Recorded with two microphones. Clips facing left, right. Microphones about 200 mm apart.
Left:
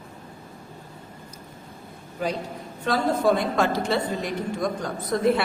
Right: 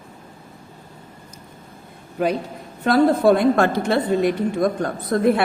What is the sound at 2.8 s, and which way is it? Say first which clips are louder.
A woman's voice: right 7 dB; 60° right (ahead or behind).